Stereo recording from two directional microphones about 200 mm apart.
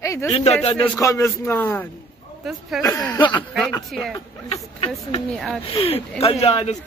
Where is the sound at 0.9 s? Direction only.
15° left (ahead or behind).